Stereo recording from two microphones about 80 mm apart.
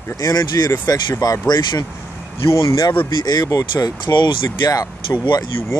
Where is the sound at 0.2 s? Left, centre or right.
Left.